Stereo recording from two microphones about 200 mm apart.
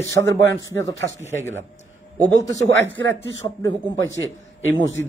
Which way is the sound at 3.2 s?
65° right (ahead or behind).